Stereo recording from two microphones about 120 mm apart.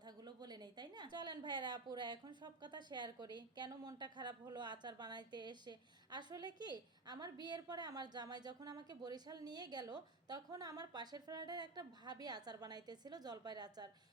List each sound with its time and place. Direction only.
0.3 s a woman's voice: 35° right (ahead or behind)